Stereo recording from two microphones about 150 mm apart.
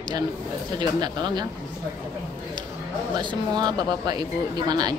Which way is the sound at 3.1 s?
30° right (ahead or behind).